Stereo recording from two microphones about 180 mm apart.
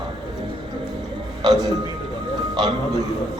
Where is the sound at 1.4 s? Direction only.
20° right (ahead or behind).